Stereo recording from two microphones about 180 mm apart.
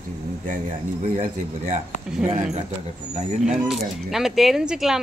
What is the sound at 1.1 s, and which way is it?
Speech, 45° right (ahead or behind).